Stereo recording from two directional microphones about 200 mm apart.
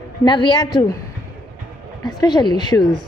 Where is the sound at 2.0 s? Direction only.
20° left (ahead or behind).